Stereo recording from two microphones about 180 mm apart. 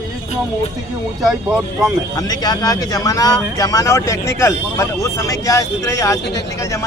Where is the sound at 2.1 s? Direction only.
20° left (ahead or behind).